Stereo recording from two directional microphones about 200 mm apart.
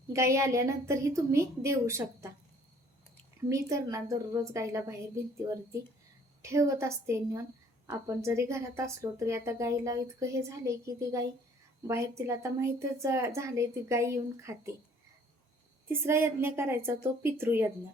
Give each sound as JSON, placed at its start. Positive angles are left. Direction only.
{"t": 0.1, "sound": "a woman's voice", "side_deg": -15}
{"t": 3.5, "sound": "a woman's voice", "side_deg": -15}
{"t": 6.4, "sound": "a woman's voice", "side_deg": -15}
{"t": 15.9, "sound": "a woman's voice", "side_deg": -10}